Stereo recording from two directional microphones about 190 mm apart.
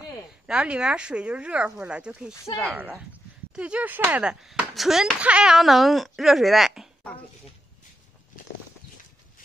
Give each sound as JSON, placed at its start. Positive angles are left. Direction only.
{"t": 0.0, "sound": "speech", "side_deg": -5}